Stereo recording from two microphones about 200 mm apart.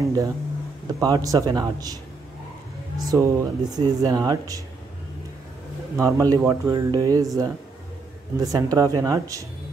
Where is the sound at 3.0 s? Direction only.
20° right (ahead or behind).